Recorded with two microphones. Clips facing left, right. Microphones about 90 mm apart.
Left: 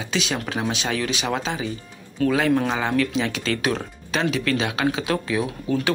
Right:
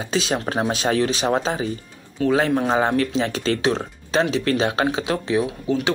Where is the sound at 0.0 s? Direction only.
35° right (ahead or behind).